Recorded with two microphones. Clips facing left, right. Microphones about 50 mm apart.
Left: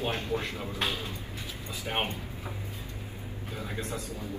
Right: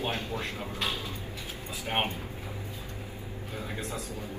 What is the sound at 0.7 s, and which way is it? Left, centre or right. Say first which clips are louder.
Speech: left 2 dB; left.